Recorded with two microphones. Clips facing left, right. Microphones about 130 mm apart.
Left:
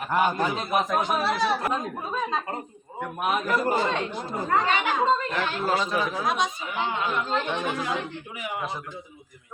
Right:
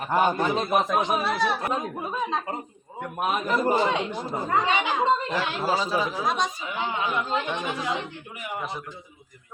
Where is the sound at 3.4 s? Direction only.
20° right (ahead or behind).